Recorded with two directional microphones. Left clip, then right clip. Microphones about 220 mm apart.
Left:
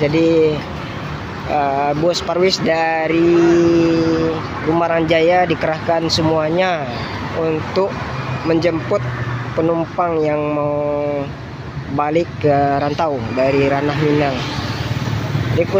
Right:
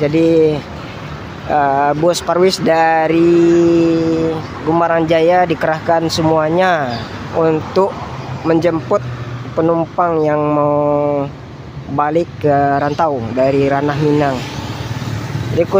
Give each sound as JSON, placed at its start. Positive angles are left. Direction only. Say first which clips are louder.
{"t": 0.0, "sound": "speech", "louder": "right 2 dB", "side_deg": -20}
{"t": 15.6, "sound": "speech", "louder": "right 3 dB", "side_deg": -15}